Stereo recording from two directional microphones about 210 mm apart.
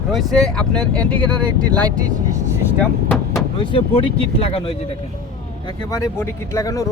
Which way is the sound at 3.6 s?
25° left (ahead or behind).